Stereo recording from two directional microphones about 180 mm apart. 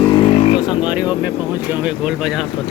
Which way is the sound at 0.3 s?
30° left (ahead or behind).